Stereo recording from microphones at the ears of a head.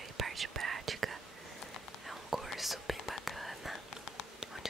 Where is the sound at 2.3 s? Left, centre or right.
Centre.